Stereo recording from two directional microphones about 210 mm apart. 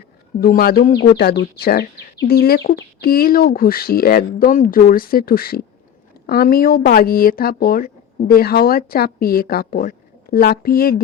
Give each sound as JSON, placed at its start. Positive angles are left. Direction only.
{"t": 0.3, "sound": "speech", "side_deg": 45}